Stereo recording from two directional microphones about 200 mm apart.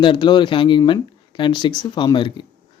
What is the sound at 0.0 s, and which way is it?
Speech, 25° left (ahead or behind).